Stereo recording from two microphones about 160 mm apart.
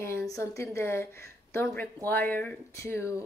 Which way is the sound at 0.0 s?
20° left (ahead or behind).